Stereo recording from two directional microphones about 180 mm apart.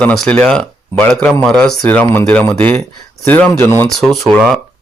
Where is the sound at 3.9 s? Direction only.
Centre (ahead or behind).